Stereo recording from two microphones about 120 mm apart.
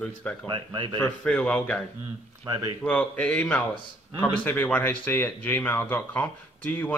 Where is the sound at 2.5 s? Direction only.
30° right (ahead or behind).